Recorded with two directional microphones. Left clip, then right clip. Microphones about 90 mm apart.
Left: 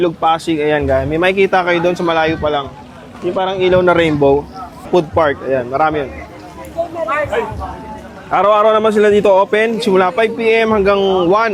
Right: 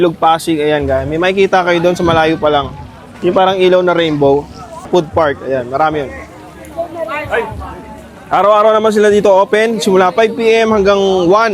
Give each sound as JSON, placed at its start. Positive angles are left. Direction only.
{"t": 0.0, "sound": "a man's voice", "side_deg": -30}
{"t": 3.8, "sound": "speech", "side_deg": -5}
{"t": 4.9, "sound": "a man's voice", "side_deg": -20}
{"t": 8.3, "sound": "a man's voice", "side_deg": -10}